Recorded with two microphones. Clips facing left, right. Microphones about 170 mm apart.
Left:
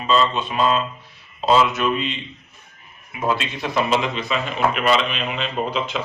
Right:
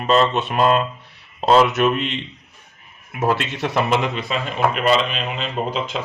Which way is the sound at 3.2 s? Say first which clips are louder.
Right 2 dB; 60° right (ahead or behind).